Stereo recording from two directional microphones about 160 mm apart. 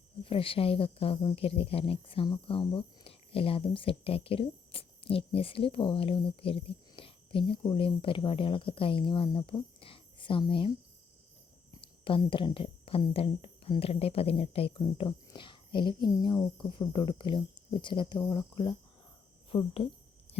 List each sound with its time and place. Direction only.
0.3 s a woman's voice: 35° left (ahead or behind)
11.7 s a woman's voice: 30° left (ahead or behind)
18.3 s cricket: 30° left (ahead or behind)
19.5 s a woman's voice: 35° left (ahead or behind)
20.3 s a sound: 40° left (ahead or behind)